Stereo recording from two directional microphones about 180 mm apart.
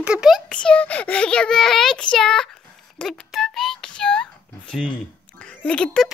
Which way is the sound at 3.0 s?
Centre (ahead or behind).